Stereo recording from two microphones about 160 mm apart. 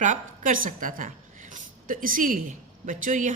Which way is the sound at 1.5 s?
60° right (ahead or behind).